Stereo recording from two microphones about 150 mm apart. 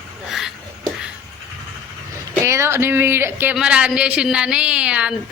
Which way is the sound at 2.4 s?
20° right (ahead or behind).